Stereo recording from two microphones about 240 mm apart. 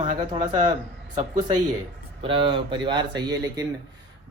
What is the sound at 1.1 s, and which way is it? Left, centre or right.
Mantra, centre.